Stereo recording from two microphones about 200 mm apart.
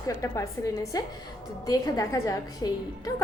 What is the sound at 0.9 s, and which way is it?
A woman's voice, 20° left (ahead or behind).